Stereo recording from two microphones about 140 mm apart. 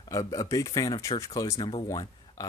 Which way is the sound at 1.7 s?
40° left (ahead or behind).